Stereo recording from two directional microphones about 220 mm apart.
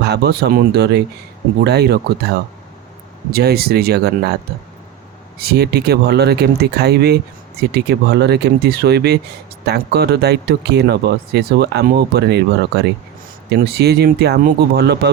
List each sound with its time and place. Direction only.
0.0 s speech: 45° right (ahead or behind)
3.3 s speech: 45° right (ahead or behind)
5.4 s speech: 45° right (ahead or behind)